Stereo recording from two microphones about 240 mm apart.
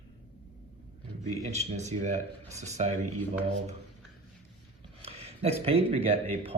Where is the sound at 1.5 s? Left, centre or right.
Right.